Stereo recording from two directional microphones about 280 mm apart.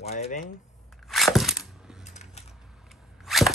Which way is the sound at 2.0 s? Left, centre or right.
Left.